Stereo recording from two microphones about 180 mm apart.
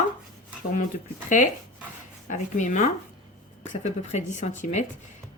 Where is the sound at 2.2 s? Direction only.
45° left (ahead or behind).